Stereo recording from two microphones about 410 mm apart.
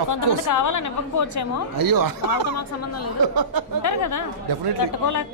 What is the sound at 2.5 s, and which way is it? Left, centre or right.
Speech, left.